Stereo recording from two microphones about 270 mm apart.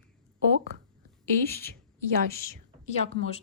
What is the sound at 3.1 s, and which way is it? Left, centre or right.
Speech, left.